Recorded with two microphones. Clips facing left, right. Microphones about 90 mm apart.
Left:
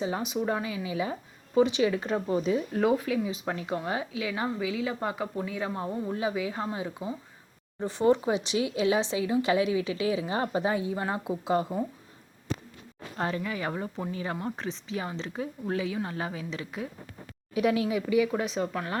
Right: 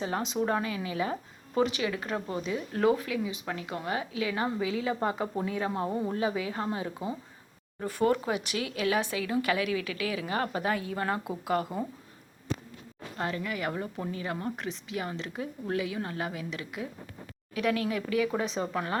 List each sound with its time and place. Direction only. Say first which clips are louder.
0.0 s speech: even; 10° left (ahead or behind)
1.6 s speech: left 4 dB; 20° left (ahead or behind)
3.0 s speech: left 3 dB; 20° left (ahead or behind)
4.3 s a woman's voice: even; 5° left (ahead or behind)
6.8 s a woman's voice: even; centre (ahead or behind)
7.8 s speech: left 3 dB; 25° left (ahead or behind)
13.1 s a woman's voice: left 2 dB; 25° left (ahead or behind); by 18.9 s 5° right (ahead or behind)